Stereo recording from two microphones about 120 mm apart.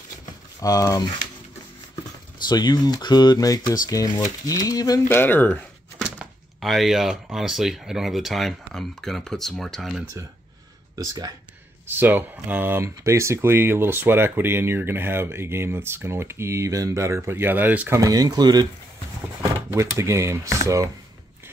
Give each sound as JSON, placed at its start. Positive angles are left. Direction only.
{"t": 0.6, "sound": "speech", "side_deg": 30}
{"t": 2.4, "sound": "speech", "side_deg": 35}
{"t": 5.0, "sound": "speech", "side_deg": 15}
{"t": 6.0, "sound": "speech", "side_deg": -5}
{"t": 11.0, "sound": "speech", "side_deg": -30}
{"t": 11.9, "sound": "speech", "side_deg": -15}
{"t": 17.9, "sound": "speech", "side_deg": -30}
{"t": 19.7, "sound": "speech", "side_deg": -25}